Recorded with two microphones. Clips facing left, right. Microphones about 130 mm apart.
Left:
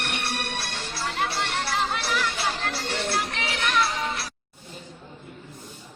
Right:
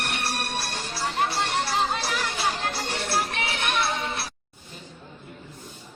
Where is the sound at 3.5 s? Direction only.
25° right (ahead or behind).